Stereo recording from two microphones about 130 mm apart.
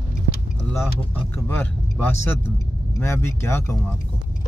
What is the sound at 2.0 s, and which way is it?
Speech, 20° left (ahead or behind).